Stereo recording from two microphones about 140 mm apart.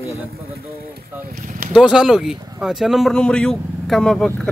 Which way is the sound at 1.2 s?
85° right.